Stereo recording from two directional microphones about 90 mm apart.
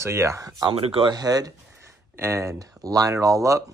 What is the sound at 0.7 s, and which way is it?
Speech, 90° right.